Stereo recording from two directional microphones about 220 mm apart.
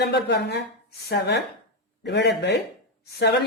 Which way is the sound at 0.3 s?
50° left (ahead or behind).